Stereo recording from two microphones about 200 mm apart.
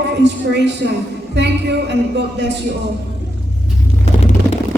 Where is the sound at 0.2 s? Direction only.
60° right (ahead or behind).